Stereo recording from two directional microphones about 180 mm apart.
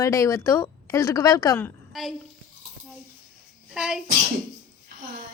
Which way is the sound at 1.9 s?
Centre (ahead or behind).